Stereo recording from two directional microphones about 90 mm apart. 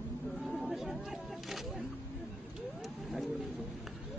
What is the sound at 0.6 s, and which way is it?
Chatter, centre (ahead or behind).